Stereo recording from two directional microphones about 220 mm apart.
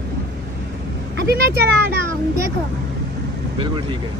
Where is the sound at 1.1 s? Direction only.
45° right (ahead or behind).